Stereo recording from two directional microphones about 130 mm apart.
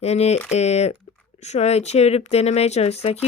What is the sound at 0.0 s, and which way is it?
Speech, 55° left (ahead or behind).